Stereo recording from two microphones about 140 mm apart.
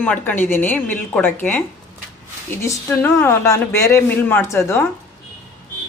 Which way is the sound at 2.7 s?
15° left (ahead or behind).